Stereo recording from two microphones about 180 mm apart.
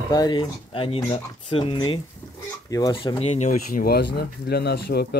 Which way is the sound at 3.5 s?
50° left (ahead or behind).